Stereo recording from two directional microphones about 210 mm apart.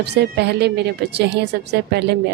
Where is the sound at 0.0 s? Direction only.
50° right (ahead or behind).